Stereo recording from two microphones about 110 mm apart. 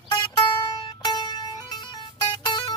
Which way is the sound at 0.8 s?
40° left (ahead or behind).